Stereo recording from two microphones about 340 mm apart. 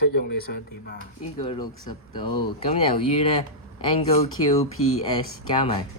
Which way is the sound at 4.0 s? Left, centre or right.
Centre.